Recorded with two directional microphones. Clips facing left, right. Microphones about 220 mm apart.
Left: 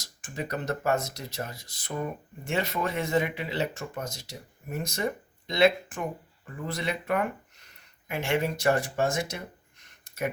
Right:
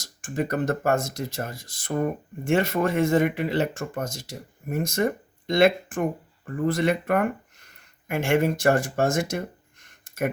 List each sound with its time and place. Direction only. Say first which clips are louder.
0.0 s speech: right 8 dB; 50° right (ahead or behind)